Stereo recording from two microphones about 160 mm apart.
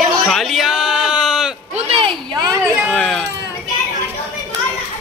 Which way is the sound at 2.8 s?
5° left (ahead or behind).